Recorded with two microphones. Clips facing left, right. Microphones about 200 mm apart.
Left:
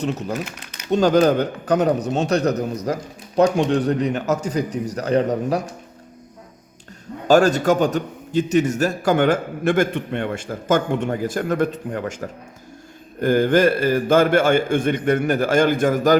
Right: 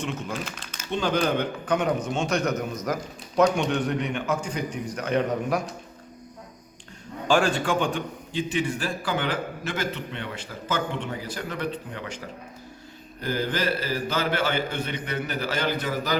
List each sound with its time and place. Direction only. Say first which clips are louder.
0.0 s a man's voice: left 6 dB; 40° left (ahead or behind)
7.3 s a man's voice: left 8 dB; 40° left (ahead or behind)